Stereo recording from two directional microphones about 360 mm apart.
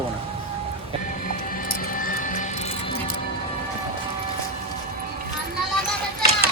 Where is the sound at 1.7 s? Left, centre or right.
Left.